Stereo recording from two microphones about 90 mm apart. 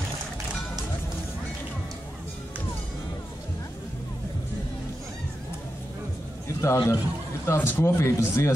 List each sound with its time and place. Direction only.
6.6 s a man's voice: 30° left (ahead or behind)